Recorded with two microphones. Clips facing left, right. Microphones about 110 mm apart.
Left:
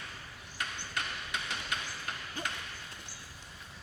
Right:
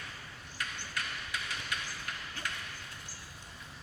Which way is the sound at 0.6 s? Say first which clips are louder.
Left 2 dB; 25° left (ahead or behind).